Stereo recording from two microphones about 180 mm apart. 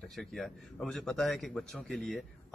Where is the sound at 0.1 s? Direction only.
Centre (ahead or behind).